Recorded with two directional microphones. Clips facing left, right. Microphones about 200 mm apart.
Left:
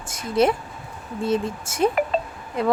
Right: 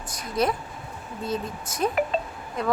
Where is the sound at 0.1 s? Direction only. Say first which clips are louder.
Left 6 dB; 25° left (ahead or behind).